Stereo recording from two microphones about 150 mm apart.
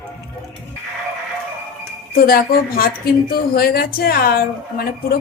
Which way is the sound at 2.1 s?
80° left.